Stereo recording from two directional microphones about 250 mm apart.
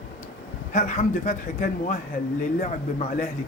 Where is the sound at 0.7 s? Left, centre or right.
Left.